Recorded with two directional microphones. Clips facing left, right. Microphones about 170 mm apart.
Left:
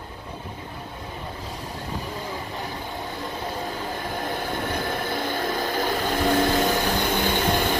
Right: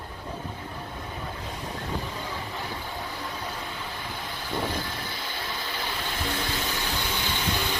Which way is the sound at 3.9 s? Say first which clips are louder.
Left 8 dB; 50° left (ahead or behind).